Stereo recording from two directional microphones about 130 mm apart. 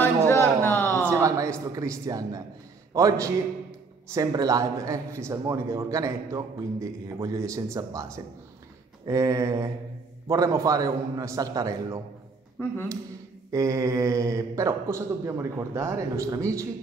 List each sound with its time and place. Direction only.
0.6 s a sound: 20° left (ahead or behind)
1.0 s a man's voice: 25° right (ahead or behind)
12.6 s speech: 20° left (ahead or behind)
13.5 s speech: 25° right (ahead or behind)